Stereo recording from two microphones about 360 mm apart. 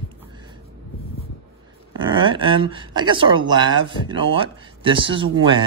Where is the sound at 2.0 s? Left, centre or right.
Centre.